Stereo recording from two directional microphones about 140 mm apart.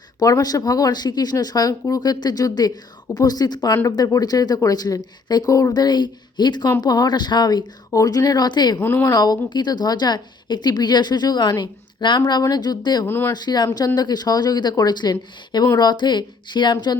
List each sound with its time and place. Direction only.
0.2 s speech: 25° left (ahead or behind)
8.8 s a woman's voice: 15° left (ahead or behind)
9.1 s a woman's voice: 30° left (ahead or behind)
13.1 s a woman's voice: 15° left (ahead or behind)
13.3 s a woman's voice: 30° left (ahead or behind)